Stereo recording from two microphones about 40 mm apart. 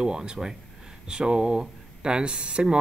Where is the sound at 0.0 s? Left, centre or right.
Right.